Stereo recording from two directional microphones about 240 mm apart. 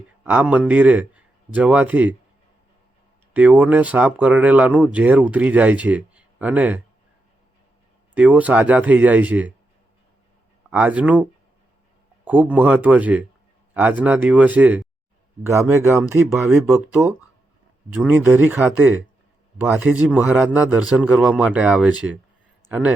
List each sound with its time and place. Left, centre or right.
0.3 s a man's voice: centre
3.3 s speech: centre
8.1 s speech: centre
10.7 s a man's voice: centre